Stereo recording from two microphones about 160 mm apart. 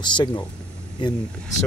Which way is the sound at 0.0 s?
30° left (ahead or behind).